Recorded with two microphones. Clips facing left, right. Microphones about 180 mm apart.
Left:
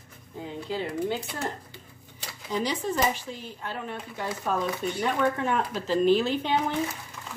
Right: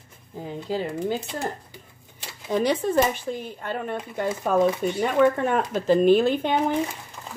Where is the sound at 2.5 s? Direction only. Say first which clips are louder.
Right 7 dB; 60° right (ahead or behind).